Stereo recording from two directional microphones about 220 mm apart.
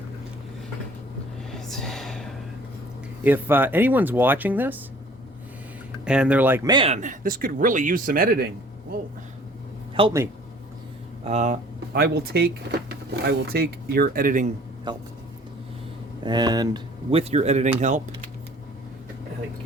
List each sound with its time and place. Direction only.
1.5 s a sound: centre (ahead or behind)
3.2 s speech: 10° right (ahead or behind)
6.1 s speech: 5° right (ahead or behind); by 8.4 s 40° right (ahead or behind)
9.9 s speech: 20° right (ahead or behind)
11.3 s speech: 30° right (ahead or behind)
11.9 s speech: 45° right (ahead or behind)
14.9 s speech: 20° right (ahead or behind)
16.2 s speech: 20° right (ahead or behind)